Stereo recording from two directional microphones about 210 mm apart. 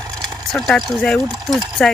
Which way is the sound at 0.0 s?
5° right (ahead or behind).